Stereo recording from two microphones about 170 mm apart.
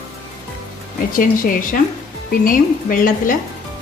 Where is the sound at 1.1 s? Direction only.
55° left (ahead or behind).